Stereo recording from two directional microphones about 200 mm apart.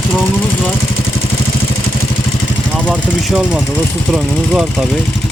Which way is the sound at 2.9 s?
Centre (ahead or behind).